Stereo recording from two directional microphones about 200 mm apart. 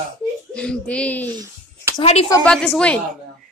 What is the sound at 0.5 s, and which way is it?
Speech, 5° left (ahead or behind).